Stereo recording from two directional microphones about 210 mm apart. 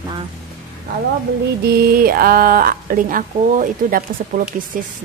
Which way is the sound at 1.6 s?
45° right (ahead or behind).